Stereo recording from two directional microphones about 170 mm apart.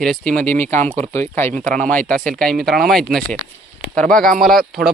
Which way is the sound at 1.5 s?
45° right (ahead or behind).